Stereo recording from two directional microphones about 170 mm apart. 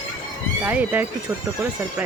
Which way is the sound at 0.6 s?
10° right (ahead or behind).